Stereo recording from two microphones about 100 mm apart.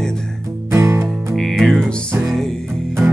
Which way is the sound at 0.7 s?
30° right (ahead or behind).